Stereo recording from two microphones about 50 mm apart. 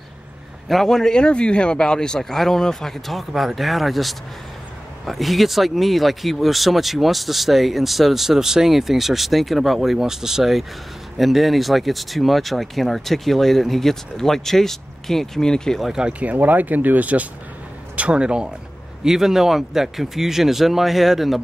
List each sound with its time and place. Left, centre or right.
0.7 s a man's voice: centre
16.1 s speech: right
19.0 s speech: centre